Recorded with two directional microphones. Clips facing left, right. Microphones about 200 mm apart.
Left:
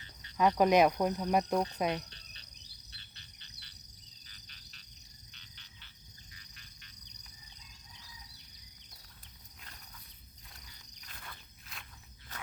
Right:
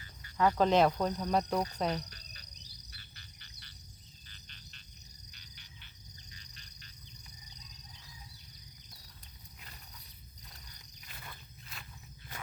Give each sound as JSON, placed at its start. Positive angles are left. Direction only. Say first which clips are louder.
{"t": 0.0, "sound": "cricket", "louder": "left 1 dB", "side_deg": 25}
{"t": 2.0, "sound": "cricket", "louder": "right 3 dB", "side_deg": 25}
{"t": 2.9, "sound": "frog", "louder": "right 3 dB", "side_deg": 20}
{"t": 6.3, "sound": "cricket", "louder": "right 3 dB", "side_deg": -35}
{"t": 11.1, "sound": "walk", "louder": "right 1 dB", "side_deg": -5}